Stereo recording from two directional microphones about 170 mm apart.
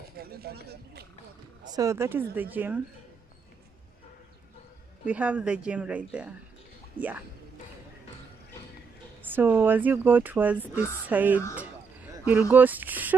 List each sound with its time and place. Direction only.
0.2 s speech: 65° right (ahead or behind)
1.7 s speech: 20° right (ahead or behind)
5.0 s speech: 10° right (ahead or behind)
9.2 s speech: 10° right (ahead or behind)